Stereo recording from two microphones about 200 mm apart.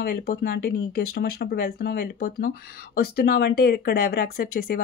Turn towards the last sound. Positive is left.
turn(degrees=50)  # may be behind; listen again after turning